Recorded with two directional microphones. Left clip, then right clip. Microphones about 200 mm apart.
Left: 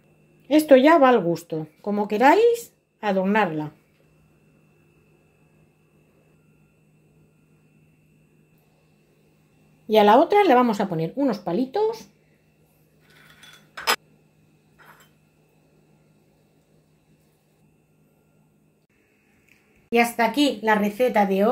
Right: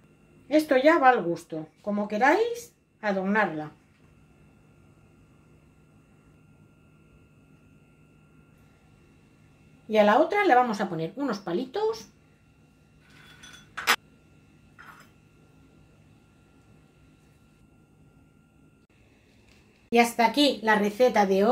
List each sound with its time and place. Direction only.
0.5 s speech: 45° left (ahead or behind)
9.8 s speech: 45° left (ahead or behind)
11.1 s speech: 25° left (ahead or behind)
19.9 s a woman's voice: 5° left (ahead or behind)